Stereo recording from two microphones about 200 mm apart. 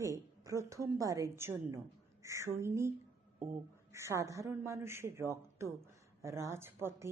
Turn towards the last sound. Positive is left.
turn(degrees=-15)  # may be behind; listen again after turning